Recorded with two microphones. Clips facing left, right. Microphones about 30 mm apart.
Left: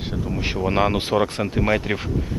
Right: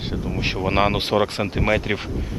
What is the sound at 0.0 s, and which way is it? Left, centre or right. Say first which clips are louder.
Speech: right 1 dB; centre.